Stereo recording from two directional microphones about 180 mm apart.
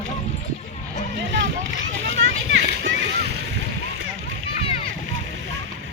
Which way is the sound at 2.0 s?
90° right.